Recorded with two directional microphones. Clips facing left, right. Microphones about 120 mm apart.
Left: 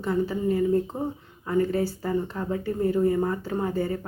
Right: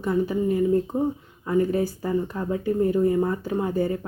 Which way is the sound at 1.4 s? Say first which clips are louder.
Right 2 dB; 20° right (ahead or behind).